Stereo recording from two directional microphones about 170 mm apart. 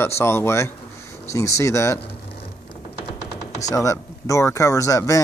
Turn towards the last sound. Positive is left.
turn(degrees=20)  # may be behind; listen again after turning